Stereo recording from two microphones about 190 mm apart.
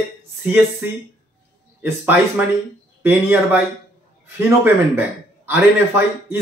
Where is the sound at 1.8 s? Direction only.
10° right (ahead or behind).